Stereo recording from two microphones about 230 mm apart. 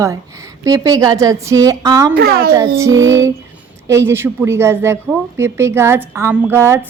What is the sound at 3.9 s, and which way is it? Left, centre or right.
A woman's voice, centre.